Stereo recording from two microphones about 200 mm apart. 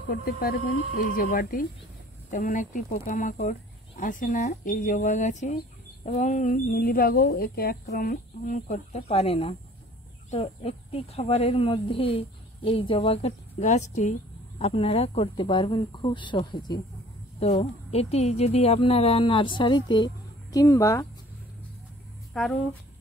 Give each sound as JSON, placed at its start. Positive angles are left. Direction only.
{"t": 0.1, "sound": "speech", "side_deg": 50}
{"t": 22.3, "sound": "speech", "side_deg": 0}